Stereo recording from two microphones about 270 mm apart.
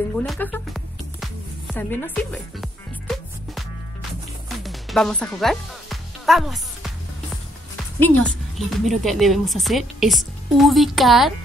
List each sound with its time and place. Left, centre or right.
0.1 s music: centre
4.6 s music: centre
8.0 s a woman's voice: centre